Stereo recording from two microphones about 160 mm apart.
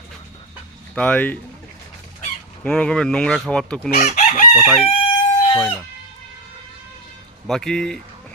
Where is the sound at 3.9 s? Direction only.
50° left (ahead or behind).